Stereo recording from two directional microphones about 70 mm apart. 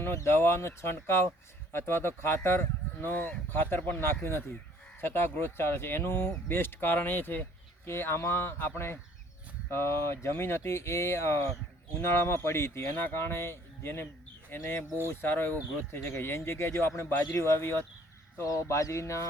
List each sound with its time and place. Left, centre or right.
0.0 s speech: left
18.3 s speech: left